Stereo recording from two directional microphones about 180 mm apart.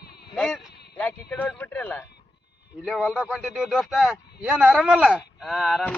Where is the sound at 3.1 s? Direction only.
Centre (ahead or behind).